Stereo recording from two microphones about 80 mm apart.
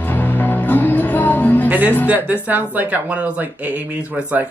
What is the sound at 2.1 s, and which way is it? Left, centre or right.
Speech, right.